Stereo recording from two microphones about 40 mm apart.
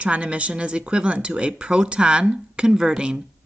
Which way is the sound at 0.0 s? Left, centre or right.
Right.